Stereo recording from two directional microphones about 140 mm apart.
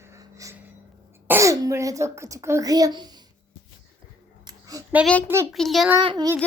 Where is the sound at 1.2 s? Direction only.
20° right (ahead or behind).